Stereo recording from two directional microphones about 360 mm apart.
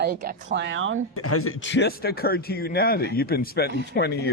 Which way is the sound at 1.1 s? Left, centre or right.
Left.